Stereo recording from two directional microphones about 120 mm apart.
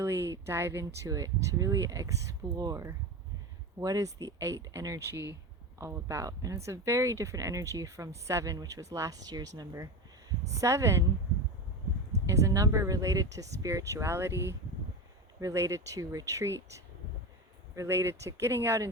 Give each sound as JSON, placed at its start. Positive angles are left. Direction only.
{"t": 0.0, "sound": "speech", "side_deg": -25}
{"t": 12.3, "sound": "speech", "side_deg": -25}